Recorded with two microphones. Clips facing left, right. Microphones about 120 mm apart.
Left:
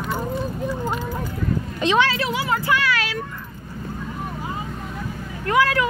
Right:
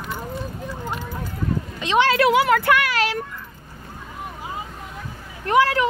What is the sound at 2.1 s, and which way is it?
Speech, 65° right (ahead or behind).